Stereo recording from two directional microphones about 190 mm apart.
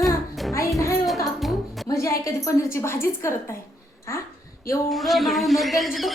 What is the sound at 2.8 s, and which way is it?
Speech, 15° left (ahead or behind).